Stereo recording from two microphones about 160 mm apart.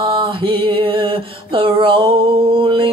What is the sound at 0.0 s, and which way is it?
Mantra, 30° right (ahead or behind).